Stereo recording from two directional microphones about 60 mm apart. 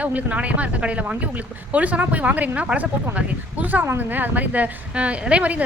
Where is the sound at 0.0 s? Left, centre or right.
Right.